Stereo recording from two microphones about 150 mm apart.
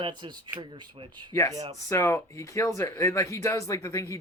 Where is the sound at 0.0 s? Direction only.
30° right (ahead or behind).